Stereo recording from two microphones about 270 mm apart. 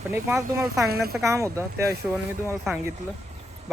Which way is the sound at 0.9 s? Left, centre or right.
Right.